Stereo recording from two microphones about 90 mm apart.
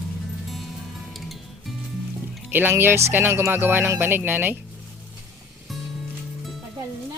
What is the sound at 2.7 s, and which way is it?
Music, 25° right (ahead or behind).